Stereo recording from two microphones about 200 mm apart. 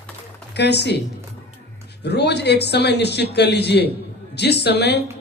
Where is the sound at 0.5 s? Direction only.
55° left (ahead or behind).